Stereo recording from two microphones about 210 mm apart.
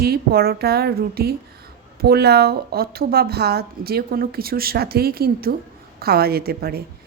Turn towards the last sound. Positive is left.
turn(degrees=-45)  # may be behind; listen again after turning